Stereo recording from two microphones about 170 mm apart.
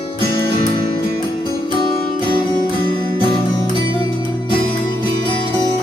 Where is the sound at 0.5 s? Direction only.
30° left (ahead or behind).